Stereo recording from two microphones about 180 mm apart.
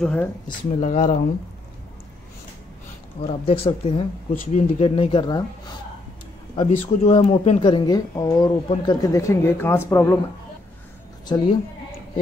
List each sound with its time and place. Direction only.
0.0 s speech: 5° left (ahead or behind)
0.7 s speech: 40° left (ahead or behind)
3.4 s speech: 30° left (ahead or behind)
6.5 s speech: 30° left (ahead or behind); by 10.1 s 15° left (ahead or behind)
11.2 s a woman's voice: 25° left (ahead or behind)